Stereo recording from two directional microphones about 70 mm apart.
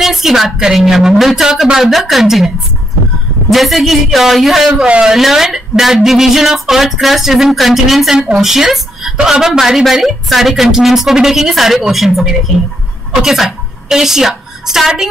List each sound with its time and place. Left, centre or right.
0.0 s speech: centre
4.8 s speech: centre
5.1 s a woman's voice: centre